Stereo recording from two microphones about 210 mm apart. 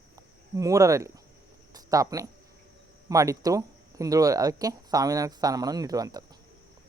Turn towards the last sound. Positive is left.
turn(degrees=-15)  # may be behind; listen again after turning